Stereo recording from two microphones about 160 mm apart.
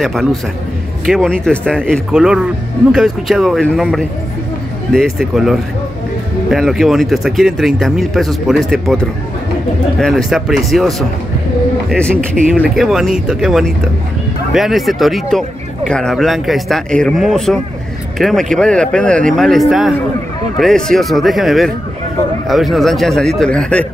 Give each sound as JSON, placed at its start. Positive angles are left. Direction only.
{"t": 0.0, "sound": "speech", "side_deg": 0}